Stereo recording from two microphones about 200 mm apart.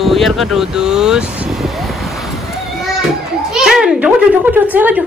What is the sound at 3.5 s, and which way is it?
Children playing, centre (ahead or behind).